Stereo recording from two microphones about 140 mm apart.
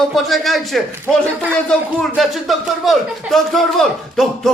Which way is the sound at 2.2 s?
Centre (ahead or behind).